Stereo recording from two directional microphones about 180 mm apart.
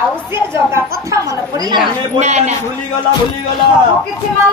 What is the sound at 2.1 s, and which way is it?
Speech, 40° right (ahead or behind).